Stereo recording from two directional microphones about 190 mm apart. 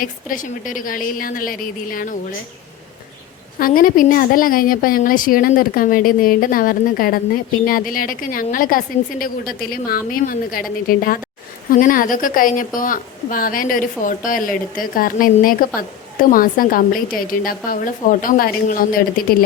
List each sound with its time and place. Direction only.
0.0 s a woman's voice: 45° left (ahead or behind)
3.6 s a woman's voice: 50° left (ahead or behind)